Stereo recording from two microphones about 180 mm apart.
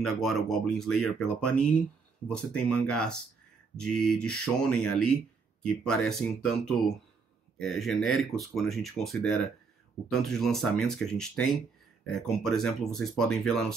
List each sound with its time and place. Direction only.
0.0 s speech: centre (ahead or behind)